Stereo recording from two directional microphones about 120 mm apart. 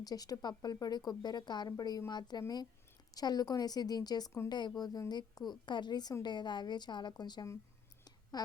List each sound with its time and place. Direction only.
0.0 s speech: 30° left (ahead or behind)